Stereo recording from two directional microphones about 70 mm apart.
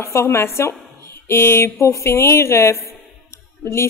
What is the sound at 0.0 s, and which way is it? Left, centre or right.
A woman's voice, left.